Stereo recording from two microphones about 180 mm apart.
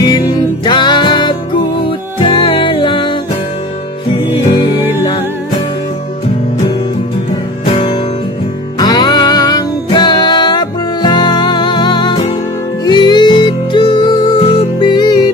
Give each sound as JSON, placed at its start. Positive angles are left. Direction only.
{"t": 0.6, "sound": "music", "side_deg": 25}
{"t": 7.6, "sound": "music", "side_deg": 30}